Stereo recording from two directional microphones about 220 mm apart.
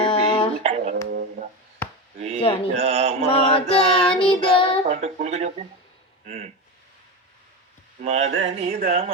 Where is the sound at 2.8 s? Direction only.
30° right (ahead or behind).